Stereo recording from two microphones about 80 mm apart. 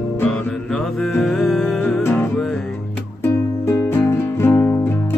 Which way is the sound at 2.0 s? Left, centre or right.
Left.